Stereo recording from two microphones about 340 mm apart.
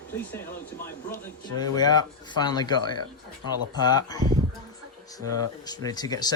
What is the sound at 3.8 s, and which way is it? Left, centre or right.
Speech, centre.